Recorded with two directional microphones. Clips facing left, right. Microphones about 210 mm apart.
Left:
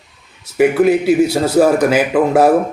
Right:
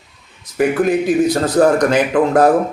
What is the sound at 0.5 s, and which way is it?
A man's voice, 10° left (ahead or behind).